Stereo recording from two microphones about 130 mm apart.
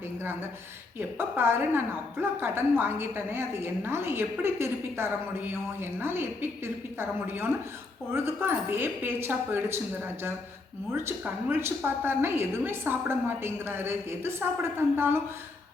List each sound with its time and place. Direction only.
0.9 s a woman's voice: 15° right (ahead or behind)
8.1 s a woman's voice: 20° right (ahead or behind)